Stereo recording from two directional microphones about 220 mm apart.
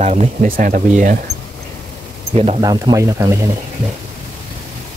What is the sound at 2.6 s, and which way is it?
Speech, 15° right (ahead or behind).